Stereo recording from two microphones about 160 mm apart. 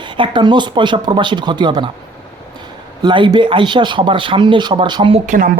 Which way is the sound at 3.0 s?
30° right (ahead or behind).